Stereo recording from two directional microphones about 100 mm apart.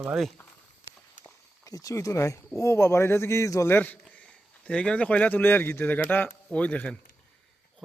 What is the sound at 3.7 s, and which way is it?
A man's voice, 15° left (ahead or behind).